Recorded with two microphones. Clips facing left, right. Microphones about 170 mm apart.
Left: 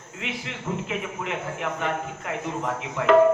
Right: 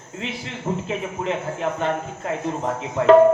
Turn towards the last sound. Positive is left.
turn(degrees=-35)  # may be behind; listen again after turning